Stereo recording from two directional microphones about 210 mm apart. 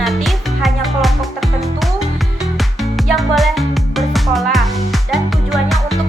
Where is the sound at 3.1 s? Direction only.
Centre (ahead or behind).